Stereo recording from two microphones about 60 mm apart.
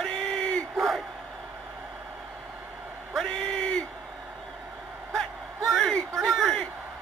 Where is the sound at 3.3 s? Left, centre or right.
Centre.